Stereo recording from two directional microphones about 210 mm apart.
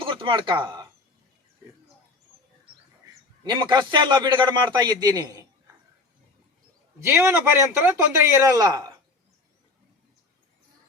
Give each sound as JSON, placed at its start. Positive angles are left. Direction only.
{"t": 0.0, "sound": "speech", "side_deg": -25}
{"t": 3.4, "sound": "a man's voice", "side_deg": -20}
{"t": 7.0, "sound": "a man's voice", "side_deg": -10}